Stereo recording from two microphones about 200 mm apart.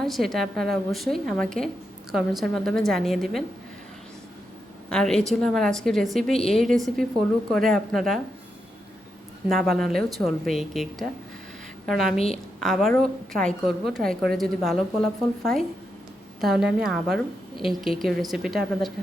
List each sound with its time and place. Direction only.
0.0 s a woman's voice: centre (ahead or behind)
4.9 s a woman's voice: 5° left (ahead or behind)
9.5 s a woman's voice: centre (ahead or behind)
12.1 s a woman's voice: 30° left (ahead or behind)
12.5 s a woman's voice: centre (ahead or behind)